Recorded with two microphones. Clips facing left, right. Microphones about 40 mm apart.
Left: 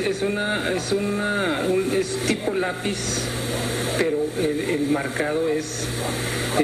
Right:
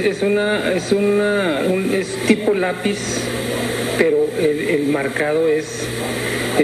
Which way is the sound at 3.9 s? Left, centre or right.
Right.